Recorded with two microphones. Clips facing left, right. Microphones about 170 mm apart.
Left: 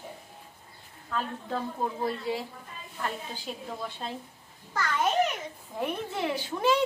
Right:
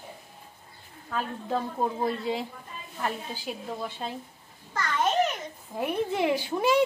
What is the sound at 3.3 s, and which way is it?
Speech, 5° right (ahead or behind).